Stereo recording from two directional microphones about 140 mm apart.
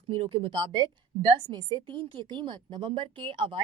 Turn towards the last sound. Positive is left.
turn(degrees=-35)  # may be behind; listen again after turning